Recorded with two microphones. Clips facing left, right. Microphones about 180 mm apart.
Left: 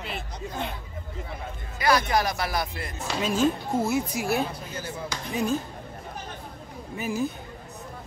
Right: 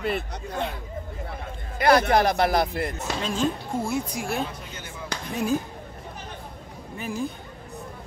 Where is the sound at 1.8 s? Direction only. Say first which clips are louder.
Right 4 dB; 55° right (ahead or behind).